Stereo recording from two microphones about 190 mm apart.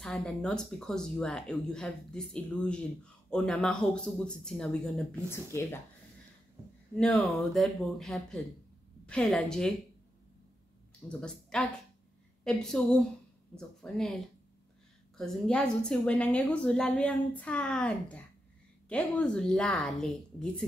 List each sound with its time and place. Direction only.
0.0 s speech: 5° left (ahead or behind)
5.3 s speech: 15° left (ahead or behind)
7.0 s speech: 5° left (ahead or behind)
11.1 s speech: 5° left (ahead or behind)